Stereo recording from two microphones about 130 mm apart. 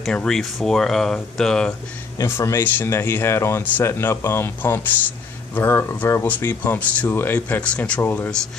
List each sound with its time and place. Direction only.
0.0 s speech: 5° left (ahead or behind)
2.1 s speech: 20° left (ahead or behind)